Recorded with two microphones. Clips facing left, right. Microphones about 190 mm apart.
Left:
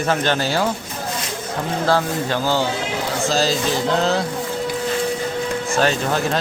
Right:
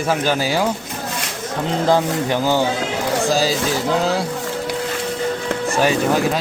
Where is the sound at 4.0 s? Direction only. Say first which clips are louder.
Even; 10° right (ahead or behind).